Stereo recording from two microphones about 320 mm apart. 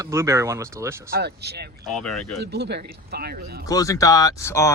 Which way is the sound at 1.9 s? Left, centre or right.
Centre.